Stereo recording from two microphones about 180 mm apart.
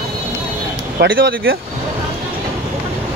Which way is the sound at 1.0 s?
60° right (ahead or behind).